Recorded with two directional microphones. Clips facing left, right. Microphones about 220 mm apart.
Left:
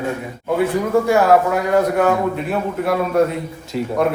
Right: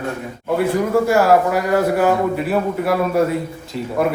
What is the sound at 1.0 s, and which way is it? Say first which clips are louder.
Speech: left 1 dB; centre (ahead or behind).